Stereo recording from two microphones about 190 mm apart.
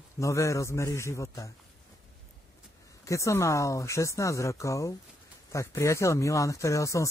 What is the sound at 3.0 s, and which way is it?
Speech, 15° left (ahead or behind).